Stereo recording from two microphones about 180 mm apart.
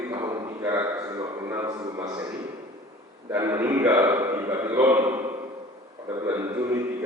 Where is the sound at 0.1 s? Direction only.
20° right (ahead or behind).